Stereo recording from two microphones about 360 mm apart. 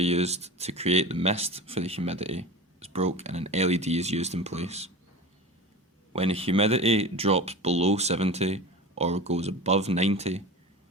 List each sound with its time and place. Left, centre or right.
0.0 s speech: centre
6.1 s speech: centre